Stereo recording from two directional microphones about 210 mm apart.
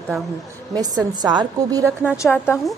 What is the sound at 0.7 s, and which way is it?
A woman's voice, 20° right (ahead or behind).